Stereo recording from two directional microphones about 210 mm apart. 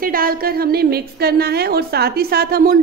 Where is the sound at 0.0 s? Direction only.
45° right (ahead or behind).